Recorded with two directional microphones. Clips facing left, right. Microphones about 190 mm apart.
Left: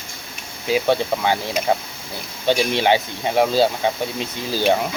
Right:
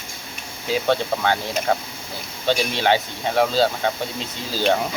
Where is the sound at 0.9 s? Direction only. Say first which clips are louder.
Right 1 dB; 10° left (ahead or behind).